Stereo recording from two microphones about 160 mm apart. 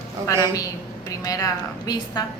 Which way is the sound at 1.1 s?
20° left (ahead or behind).